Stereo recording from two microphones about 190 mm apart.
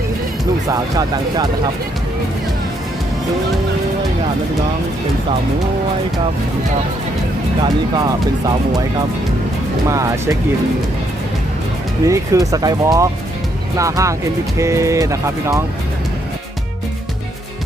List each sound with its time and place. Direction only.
0.7 s speech: 20° right (ahead or behind)
7.6 s speech: 20° right (ahead or behind)
9.8 s speech: 15° right (ahead or behind)
12.0 s speech: 15° right (ahead or behind)